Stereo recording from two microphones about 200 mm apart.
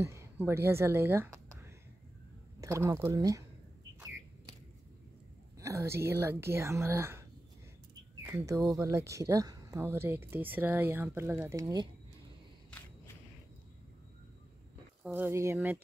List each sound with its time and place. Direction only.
0.0 s a sound: 15° right (ahead or behind)
0.5 s speech: 10° right (ahead or behind)
5.6 s speech: 15° right (ahead or behind)
8.3 s speech: 15° right (ahead or behind)
15.0 s speech: 10° right (ahead or behind)